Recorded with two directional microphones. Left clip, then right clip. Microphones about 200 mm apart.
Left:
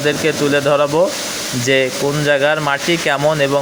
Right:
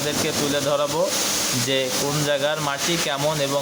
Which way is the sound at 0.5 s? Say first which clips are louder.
Left 9 dB; 30° left (ahead or behind).